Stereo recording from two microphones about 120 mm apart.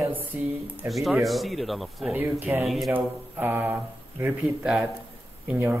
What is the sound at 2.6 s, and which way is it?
Speech, centre (ahead or behind).